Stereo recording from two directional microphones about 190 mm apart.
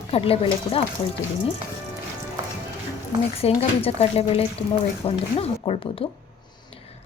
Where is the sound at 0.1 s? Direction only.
30° left (ahead or behind).